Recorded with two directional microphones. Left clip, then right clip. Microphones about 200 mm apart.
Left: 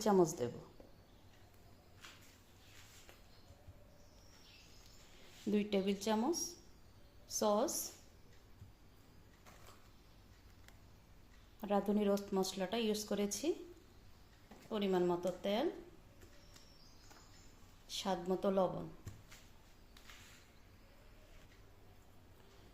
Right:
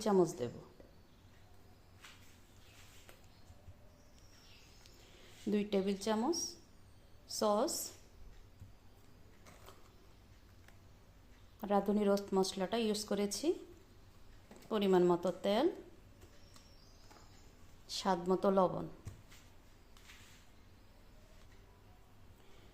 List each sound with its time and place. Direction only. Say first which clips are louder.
0.0 s a woman's voice: even; centre (ahead or behind)
5.5 s a woman's voice: right 1 dB; 5° right (ahead or behind)
11.6 s speech: right 2 dB; 15° right (ahead or behind)
14.7 s a woman's voice: right 5 dB; 25° right (ahead or behind)
18.0 s a woman's voice: right 4 dB; 20° right (ahead or behind)